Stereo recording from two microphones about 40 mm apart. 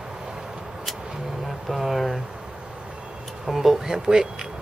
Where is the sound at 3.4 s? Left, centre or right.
Centre.